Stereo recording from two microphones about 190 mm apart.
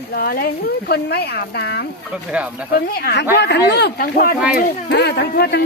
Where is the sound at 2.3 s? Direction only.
5° right (ahead or behind).